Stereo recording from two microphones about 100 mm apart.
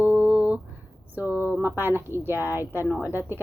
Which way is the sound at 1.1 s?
20° right (ahead or behind).